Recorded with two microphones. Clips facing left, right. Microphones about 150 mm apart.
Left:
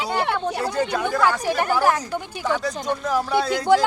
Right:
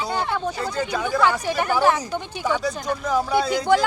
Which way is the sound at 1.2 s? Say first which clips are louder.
Even; 5° left (ahead or behind).